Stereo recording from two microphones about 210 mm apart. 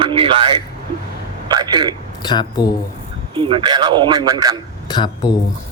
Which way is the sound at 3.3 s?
25° right (ahead or behind).